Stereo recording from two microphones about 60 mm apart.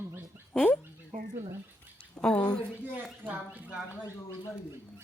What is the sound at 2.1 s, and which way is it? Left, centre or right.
Speech, centre.